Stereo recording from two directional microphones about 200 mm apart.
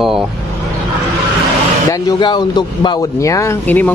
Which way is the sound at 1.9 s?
20° left (ahead or behind).